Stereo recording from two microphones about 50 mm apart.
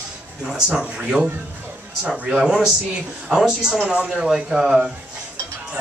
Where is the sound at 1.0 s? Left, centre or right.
Right.